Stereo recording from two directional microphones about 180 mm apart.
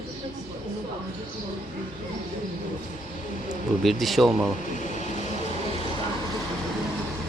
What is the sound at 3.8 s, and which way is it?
Speech, centre (ahead or behind).